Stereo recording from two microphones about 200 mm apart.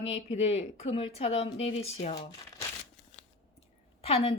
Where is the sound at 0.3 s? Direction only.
30° left (ahead or behind).